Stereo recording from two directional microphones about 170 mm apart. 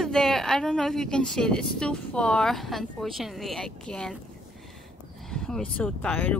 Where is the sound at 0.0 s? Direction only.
Centre (ahead or behind).